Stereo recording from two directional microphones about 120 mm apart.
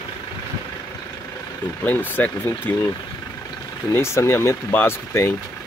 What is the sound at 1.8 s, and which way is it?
Speech, 15° left (ahead or behind).